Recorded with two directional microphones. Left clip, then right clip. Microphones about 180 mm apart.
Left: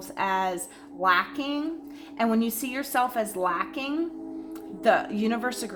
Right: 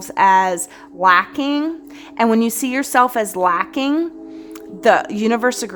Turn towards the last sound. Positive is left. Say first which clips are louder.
# right 11 dB
turn(degrees=-65)  # may be behind; listen again after turning